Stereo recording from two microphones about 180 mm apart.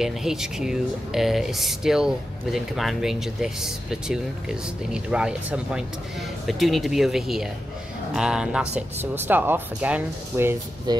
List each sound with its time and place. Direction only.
0.0 s speech: centre (ahead or behind)
10.9 s speech: 25° right (ahead or behind)